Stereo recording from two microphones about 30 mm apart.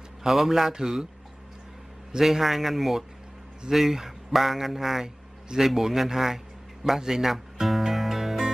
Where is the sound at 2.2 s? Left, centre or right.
Centre.